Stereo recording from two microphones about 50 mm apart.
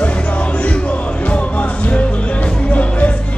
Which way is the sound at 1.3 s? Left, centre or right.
Left.